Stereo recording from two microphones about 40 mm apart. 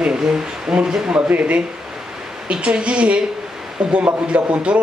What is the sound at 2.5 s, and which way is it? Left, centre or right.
A man's voice, right.